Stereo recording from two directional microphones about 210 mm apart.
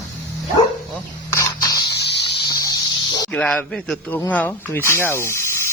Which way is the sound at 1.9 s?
55° left (ahead or behind).